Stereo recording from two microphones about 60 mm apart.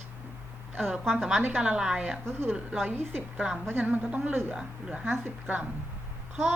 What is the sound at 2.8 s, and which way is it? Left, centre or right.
A woman's voice, right.